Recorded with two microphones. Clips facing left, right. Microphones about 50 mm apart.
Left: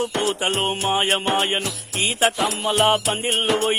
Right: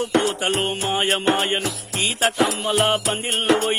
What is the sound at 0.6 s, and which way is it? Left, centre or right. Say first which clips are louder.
Music: left 2 dB; left.